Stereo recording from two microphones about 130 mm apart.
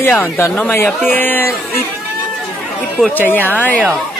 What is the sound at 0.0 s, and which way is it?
Speech, 15° left (ahead or behind).